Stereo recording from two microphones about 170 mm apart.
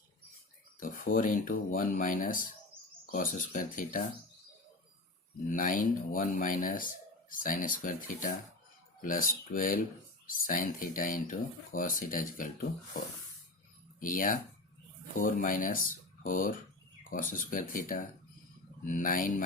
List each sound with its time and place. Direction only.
0.8 s speech: 55° left (ahead or behind)
5.5 s speech: 55° left (ahead or behind)
14.0 s speech: 55° left (ahead or behind)
17.0 s a sound: 55° left (ahead or behind)
17.3 s speech: 55° left (ahead or behind)